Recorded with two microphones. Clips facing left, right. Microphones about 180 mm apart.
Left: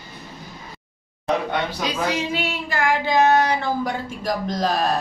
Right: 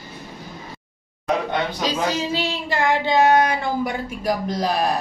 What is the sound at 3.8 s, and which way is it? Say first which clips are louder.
Speech: right 2 dB; 10° right (ahead or behind).